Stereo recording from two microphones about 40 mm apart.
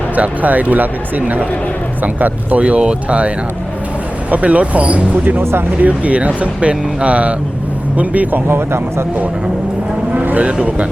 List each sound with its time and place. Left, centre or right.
0.2 s speech: right
5.4 s speech: right
5.8 s speech: right
8.4 s speech: right
10.2 s vehicle: right